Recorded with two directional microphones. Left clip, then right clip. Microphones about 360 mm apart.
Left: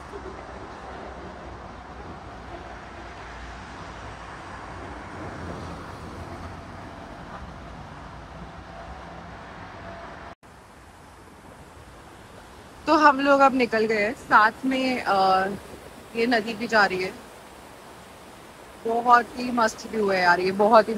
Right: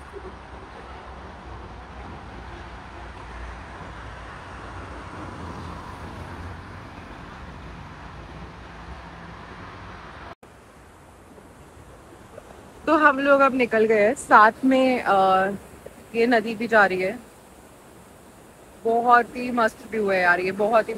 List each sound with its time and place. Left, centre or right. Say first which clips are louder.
12.8 s a woman's voice: even; centre
19.0 s a woman's voice: left 1 dB; centre